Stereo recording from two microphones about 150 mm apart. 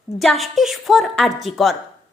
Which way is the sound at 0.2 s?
Centre (ahead or behind).